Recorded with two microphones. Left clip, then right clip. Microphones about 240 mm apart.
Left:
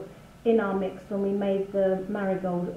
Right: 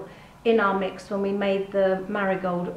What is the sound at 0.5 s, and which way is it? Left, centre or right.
A woman's voice, right.